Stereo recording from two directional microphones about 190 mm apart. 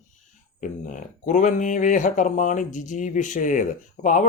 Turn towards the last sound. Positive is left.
turn(degrees=40)  # may be behind; listen again after turning